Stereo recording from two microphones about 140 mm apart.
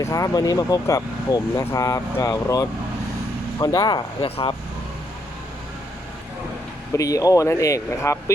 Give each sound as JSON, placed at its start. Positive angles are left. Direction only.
{"t": 0.0, "sound": "speech", "side_deg": 25}
{"t": 6.9, "sound": "speech", "side_deg": 25}